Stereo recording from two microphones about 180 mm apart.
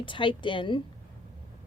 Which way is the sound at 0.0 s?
25° left (ahead or behind).